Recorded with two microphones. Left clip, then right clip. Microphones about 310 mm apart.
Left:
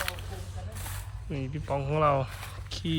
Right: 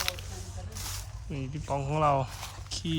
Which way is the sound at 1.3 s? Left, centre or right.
Centre.